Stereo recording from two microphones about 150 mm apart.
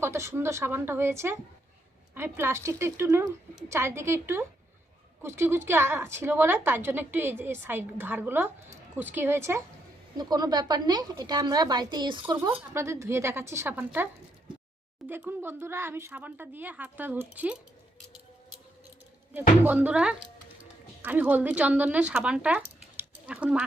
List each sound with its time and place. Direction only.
0.0 s a woman's voice: 20° right (ahead or behind); by 12.6 s 35° right (ahead or behind)
12.7 s a woman's voice: 20° right (ahead or behind)
15.1 s a woman's voice: 15° right (ahead or behind)
19.3 s a woman's voice: 10° right (ahead or behind)
23.0 s a sound: 10° right (ahead or behind)